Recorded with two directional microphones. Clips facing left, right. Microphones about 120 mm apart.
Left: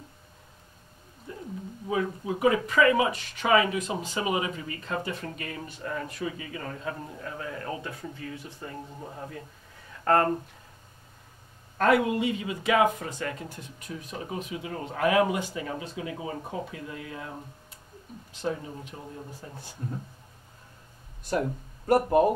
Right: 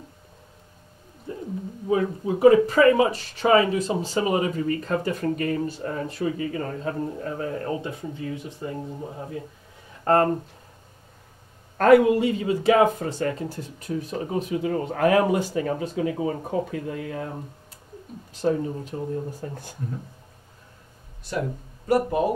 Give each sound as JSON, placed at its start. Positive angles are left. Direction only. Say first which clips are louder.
{"t": 1.3, "sound": "a sound", "louder": "right 6 dB", "side_deg": -35}
{"t": 1.9, "sound": "speech", "louder": "right 6 dB", "side_deg": -35}
{"t": 7.8, "sound": "speech", "louder": "right 6 dB", "side_deg": -20}
{"t": 10.0, "sound": "speech", "louder": "right 3 dB", "side_deg": -30}
{"t": 11.8, "sound": "speech", "louder": "right 7 dB", "side_deg": -45}
{"t": 14.5, "sound": "speech", "louder": "right 9 dB", "side_deg": -50}
{"t": 18.3, "sound": "speech", "louder": "right 8 dB", "side_deg": -40}
{"t": 19.4, "sound": "speech", "louder": "right 9 dB", "side_deg": -55}
{"t": 21.8, "sound": "speech", "louder": "even", "side_deg": 50}